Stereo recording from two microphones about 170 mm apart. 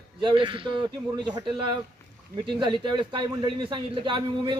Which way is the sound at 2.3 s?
30° right (ahead or behind).